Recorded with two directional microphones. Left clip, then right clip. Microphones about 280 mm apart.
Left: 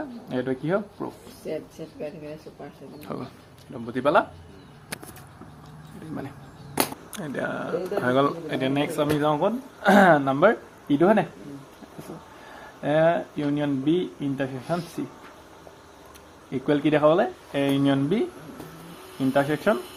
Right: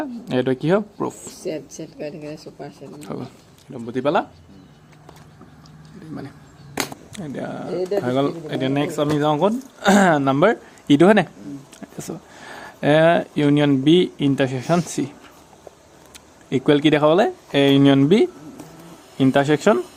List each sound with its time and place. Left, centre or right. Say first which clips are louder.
0.0 s speech: right 7 dB; right
1.8 s speech: right 4 dB; right
3.0 s speech: right 2 dB; centre
7.1 s speech: left 1 dB; centre; by 11.3 s right
12.8 s speech: right 6 dB; right
16.5 s speech: right 6 dB; right